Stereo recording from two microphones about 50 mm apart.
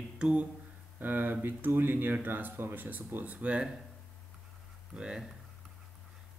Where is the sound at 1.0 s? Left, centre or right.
Right.